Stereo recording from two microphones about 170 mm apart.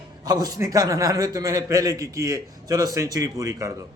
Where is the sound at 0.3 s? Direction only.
20° right (ahead or behind).